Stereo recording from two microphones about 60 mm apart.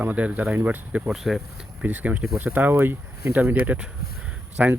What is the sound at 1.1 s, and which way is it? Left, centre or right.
Speech, centre.